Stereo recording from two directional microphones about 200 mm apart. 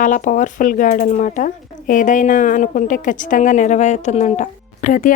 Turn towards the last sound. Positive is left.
turn(degrees=40)  # may be behind; listen again after turning